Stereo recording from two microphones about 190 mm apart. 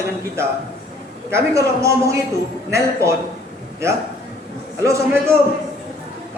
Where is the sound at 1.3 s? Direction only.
15° right (ahead or behind).